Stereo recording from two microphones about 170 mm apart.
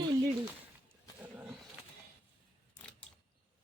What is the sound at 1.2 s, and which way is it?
Roaring cats, 10° right (ahead or behind).